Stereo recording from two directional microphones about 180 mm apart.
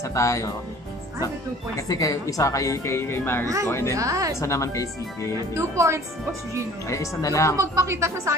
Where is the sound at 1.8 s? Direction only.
20° left (ahead or behind).